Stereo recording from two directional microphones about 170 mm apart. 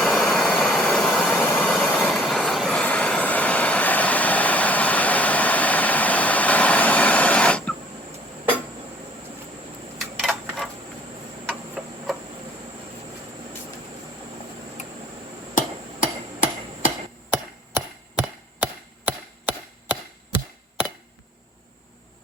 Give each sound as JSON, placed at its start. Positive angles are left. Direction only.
{"t": 0.0, "sound": "vehicle", "side_deg": 0}
{"t": 10.0, "sound": "a sound", "side_deg": 0}
{"t": 11.8, "sound": "tick-tock", "side_deg": 0}
{"t": 15.5, "sound": "hammer", "side_deg": 50}
{"t": 18.2, "sound": "chop", "side_deg": -10}